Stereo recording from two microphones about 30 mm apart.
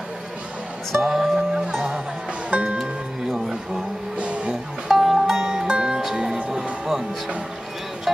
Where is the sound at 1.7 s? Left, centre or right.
Right.